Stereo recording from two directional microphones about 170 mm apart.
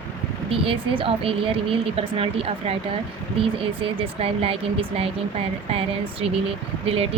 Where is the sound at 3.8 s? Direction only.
35° right (ahead or behind).